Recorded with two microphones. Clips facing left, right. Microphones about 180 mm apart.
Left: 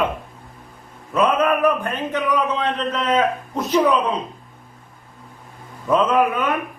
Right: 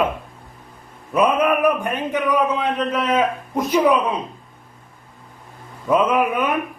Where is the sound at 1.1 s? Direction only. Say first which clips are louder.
Right 1 dB; 15° right (ahead or behind).